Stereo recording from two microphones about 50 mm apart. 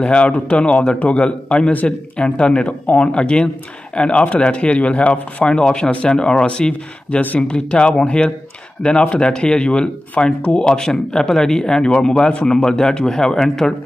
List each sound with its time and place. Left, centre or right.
0.0 s speech: left